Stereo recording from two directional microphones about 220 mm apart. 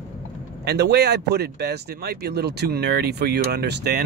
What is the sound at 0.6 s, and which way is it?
Speech, 50° right (ahead or behind).